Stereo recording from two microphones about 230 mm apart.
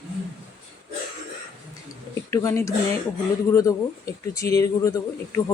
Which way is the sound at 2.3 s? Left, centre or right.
Centre.